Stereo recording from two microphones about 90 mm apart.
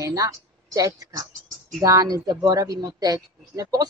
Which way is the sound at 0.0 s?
40° right (ahead or behind).